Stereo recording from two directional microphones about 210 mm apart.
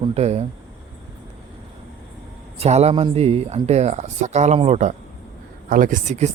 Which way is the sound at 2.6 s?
30° right (ahead or behind).